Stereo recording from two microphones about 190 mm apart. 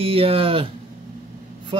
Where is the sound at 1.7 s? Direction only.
25° right (ahead or behind).